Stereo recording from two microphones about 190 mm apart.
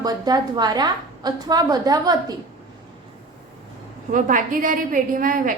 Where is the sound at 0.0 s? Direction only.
20° right (ahead or behind).